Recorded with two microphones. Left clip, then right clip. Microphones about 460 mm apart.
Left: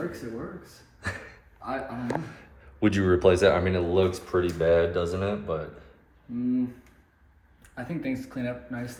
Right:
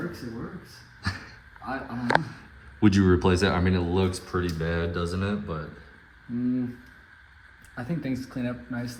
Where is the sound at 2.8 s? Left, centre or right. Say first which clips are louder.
Left 1 dB; centre.